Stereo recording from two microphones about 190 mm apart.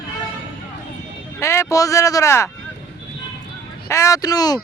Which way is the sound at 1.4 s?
15° left (ahead or behind).